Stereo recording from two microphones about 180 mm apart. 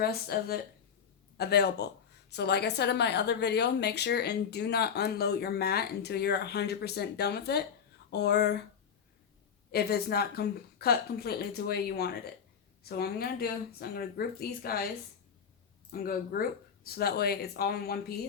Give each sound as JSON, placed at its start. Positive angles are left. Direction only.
{"t": 0.0, "sound": "a woman's voice", "side_deg": 60}
{"t": 9.7, "sound": "a woman's voice", "side_deg": 60}
{"t": 15.9, "sound": "a woman's voice", "side_deg": 55}